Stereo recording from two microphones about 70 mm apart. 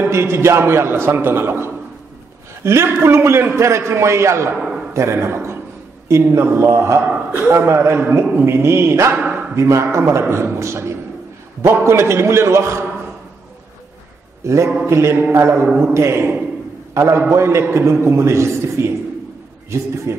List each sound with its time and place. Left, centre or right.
0.0 s a man's voice: right
9.1 s a man's voice: centre
9.6 s a man's voice: right
14.4 s a man's voice: right